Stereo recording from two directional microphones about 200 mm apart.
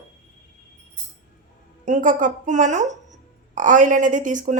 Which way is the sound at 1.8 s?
40° right (ahead or behind).